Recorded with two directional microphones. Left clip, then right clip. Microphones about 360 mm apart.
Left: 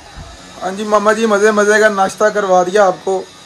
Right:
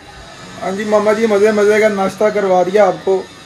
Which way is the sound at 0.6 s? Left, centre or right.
Left.